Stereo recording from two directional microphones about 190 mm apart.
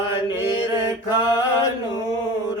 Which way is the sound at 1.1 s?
20° left (ahead or behind).